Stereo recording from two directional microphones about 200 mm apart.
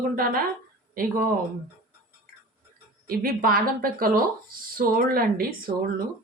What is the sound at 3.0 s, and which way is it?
A woman's voice, 45° right (ahead or behind).